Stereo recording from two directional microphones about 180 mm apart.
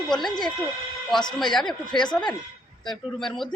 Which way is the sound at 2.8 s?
Centre (ahead or behind).